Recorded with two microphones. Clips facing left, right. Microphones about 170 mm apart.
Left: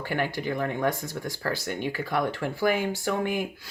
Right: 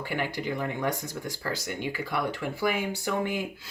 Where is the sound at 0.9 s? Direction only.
15° right (ahead or behind).